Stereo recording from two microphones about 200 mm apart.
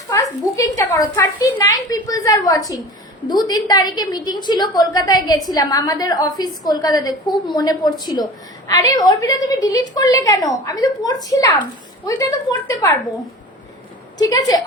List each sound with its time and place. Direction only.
0.1 s a woman's voice: 15° left (ahead or behind)
14.2 s a woman's voice: 20° left (ahead or behind)